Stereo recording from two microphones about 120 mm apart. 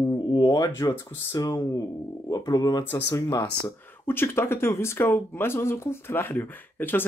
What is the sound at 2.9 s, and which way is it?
Speech, 20° left (ahead or behind).